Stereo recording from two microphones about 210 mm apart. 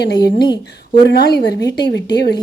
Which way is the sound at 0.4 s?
20° left (ahead or behind).